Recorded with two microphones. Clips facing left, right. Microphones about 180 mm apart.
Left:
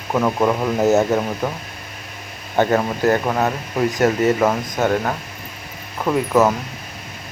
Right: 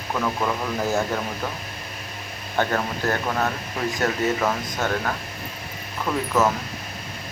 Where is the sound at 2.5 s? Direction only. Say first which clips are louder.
Left 7 dB; 15° left (ahead or behind).